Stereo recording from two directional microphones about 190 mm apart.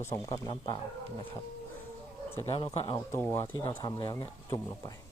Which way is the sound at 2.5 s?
25° left (ahead or behind).